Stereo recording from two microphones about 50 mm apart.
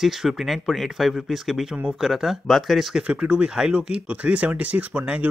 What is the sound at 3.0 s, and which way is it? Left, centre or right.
Speech, right.